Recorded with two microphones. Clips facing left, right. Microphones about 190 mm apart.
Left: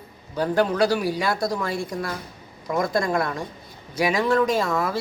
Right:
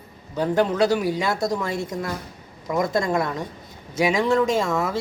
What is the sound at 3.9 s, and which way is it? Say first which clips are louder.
Speech: right 1 dB; 25° right (ahead or behind).